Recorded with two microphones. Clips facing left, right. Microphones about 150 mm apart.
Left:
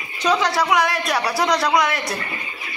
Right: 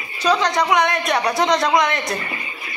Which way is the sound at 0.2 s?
10° left (ahead or behind).